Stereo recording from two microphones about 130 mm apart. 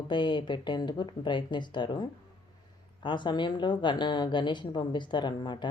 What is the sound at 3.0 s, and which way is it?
Speech, 35° left (ahead or behind).